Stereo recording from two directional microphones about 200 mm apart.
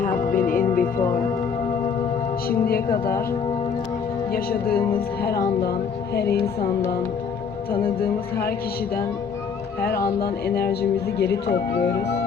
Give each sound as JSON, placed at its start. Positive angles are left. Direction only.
{"t": 0.0, "sound": "music", "side_deg": 40}
{"t": 2.5, "sound": "music", "side_deg": 50}
{"t": 4.3, "sound": "music", "side_deg": 50}
{"t": 6.1, "sound": "speech", "side_deg": 55}
{"t": 9.9, "sound": "music", "side_deg": 15}
{"t": 10.2, "sound": "speech", "side_deg": 55}